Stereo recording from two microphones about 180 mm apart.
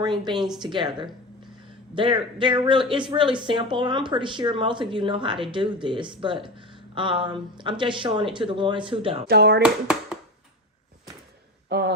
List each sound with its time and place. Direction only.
0.0 s speech: 25° right (ahead or behind)
9.2 s speech: 65° right (ahead or behind)
9.6 s speech: 5° right (ahead or behind)
11.7 s speech: 65° right (ahead or behind)